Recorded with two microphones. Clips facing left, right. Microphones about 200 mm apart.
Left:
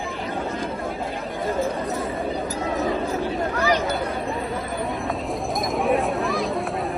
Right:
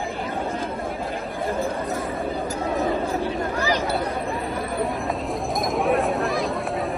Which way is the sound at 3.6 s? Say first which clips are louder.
Left 2 dB; 30° right (ahead or behind).